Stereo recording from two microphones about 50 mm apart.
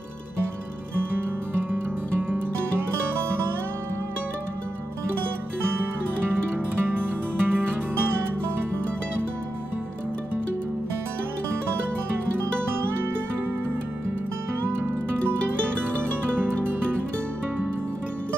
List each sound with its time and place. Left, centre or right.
6.5 s music: right